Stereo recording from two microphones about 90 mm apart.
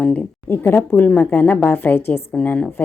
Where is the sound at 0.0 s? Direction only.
15° left (ahead or behind).